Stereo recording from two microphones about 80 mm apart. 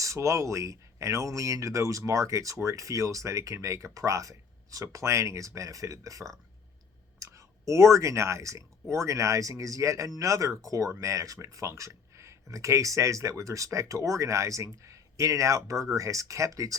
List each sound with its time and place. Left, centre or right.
0.0 s speech: right
7.3 s speech: right